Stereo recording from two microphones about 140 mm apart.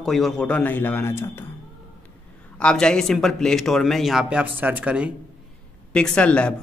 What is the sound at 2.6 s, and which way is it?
A man's voice, 5° left (ahead or behind).